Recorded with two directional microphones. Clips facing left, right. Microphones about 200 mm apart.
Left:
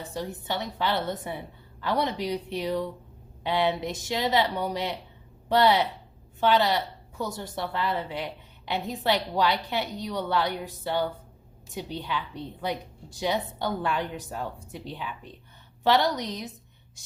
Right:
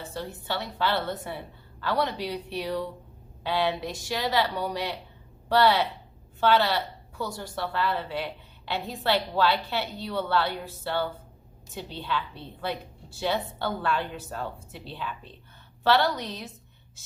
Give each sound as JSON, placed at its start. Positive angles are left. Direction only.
{"t": 0.0, "sound": "a woman's voice", "side_deg": 15}